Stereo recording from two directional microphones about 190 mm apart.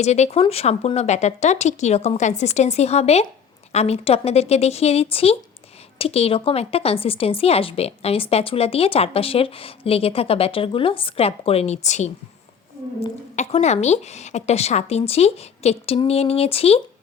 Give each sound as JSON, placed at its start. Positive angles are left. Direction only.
{"t": 0.0, "sound": "a woman's voice", "side_deg": 35}